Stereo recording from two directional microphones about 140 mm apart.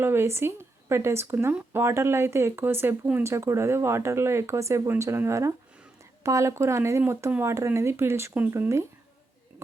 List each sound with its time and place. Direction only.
0.0 s speech: 15° right (ahead or behind)